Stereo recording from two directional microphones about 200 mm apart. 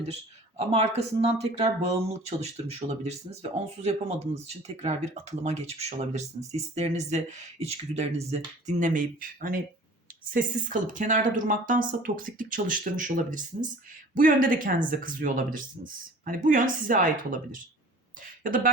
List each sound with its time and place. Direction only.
0.0 s speech: 30° right (ahead or behind)
4.8 s speech: 35° right (ahead or behind)